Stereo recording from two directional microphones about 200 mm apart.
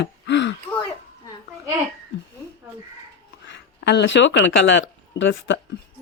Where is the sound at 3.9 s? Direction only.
60° left (ahead or behind).